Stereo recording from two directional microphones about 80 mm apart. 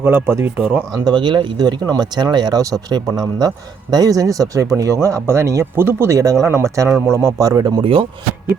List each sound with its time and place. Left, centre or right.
0.0 s speech: right
0.9 s speech: right
2.6 s a man's voice: right
2.9 s a man's voice: right